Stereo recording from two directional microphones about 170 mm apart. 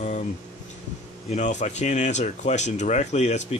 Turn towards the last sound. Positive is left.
turn(degrees=40)  # may be behind; listen again after turning